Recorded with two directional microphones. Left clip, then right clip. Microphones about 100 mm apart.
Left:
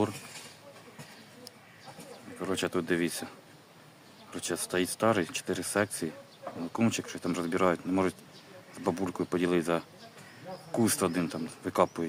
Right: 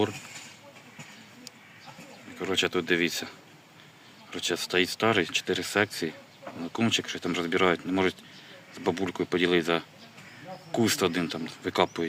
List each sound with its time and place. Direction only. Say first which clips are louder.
2.5 s speech: right 5 dB; 20° left (ahead or behind)